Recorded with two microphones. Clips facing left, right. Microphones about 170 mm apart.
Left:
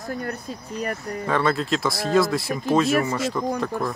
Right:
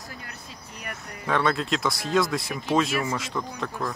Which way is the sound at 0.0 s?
50° left (ahead or behind).